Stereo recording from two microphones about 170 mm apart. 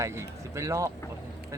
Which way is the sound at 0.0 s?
15° right (ahead or behind).